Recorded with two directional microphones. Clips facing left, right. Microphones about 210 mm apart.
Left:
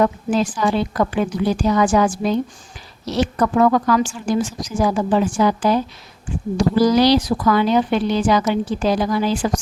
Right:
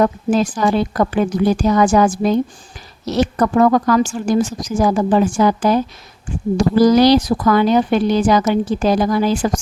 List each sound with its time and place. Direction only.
0.0 s speech: 40° right (ahead or behind)